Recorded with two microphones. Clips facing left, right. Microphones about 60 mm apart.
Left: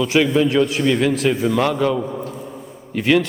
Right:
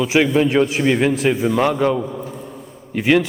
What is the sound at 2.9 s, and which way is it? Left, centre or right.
Speech, centre.